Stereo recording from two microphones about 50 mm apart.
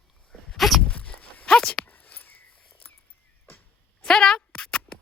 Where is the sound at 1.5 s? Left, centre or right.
Centre.